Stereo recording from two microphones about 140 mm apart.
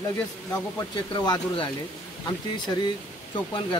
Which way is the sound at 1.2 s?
30° left (ahead or behind).